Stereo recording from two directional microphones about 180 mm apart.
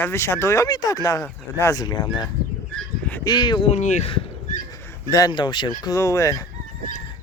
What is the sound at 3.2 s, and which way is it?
Speech, 25° left (ahead or behind).